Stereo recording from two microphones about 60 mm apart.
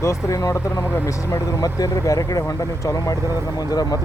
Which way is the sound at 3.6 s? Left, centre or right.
Left.